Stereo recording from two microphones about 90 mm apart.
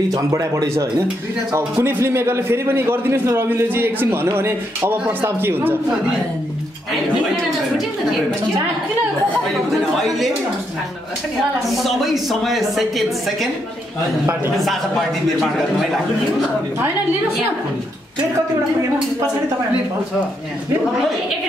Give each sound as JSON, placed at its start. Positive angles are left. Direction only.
{"t": 0.1, "sound": "a man's voice", "side_deg": -40}
{"t": 9.7, "sound": "a woman's voice", "side_deg": 0}
{"t": 11.6, "sound": "a woman's voice", "side_deg": 0}
{"t": 14.6, "sound": "a woman's voice", "side_deg": 0}